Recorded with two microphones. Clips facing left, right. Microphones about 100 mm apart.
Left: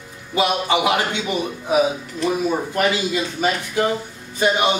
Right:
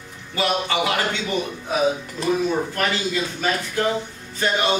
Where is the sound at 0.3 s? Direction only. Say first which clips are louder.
Left 4 dB; 15° left (ahead or behind).